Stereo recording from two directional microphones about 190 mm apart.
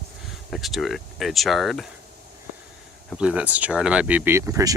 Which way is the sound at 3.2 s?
5° right (ahead or behind).